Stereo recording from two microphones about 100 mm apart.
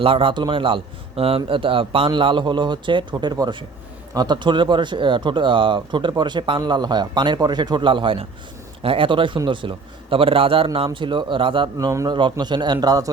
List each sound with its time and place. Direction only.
0.0 s a man's voice: 60° right (ahead or behind)
1.5 s a man's voice: 60° right (ahead or behind)
10.9 s a man's voice: 55° right (ahead or behind)
11.8 s a man's voice: 30° right (ahead or behind)
12.0 s speech: 50° right (ahead or behind)